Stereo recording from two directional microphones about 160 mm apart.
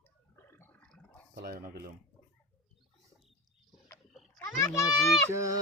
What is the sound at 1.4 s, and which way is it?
Speech, 70° right (ahead or behind).